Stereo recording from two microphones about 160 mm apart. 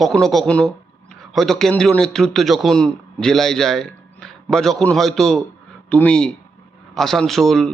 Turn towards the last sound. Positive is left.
turn(degrees=0)  # may be behind; listen again after turning